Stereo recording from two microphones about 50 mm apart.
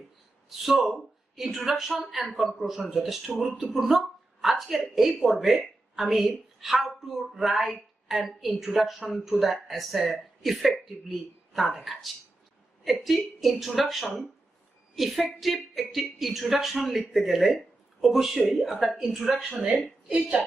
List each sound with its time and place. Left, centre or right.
0.6 s a woman's voice: centre
20.1 s a woman's voice: right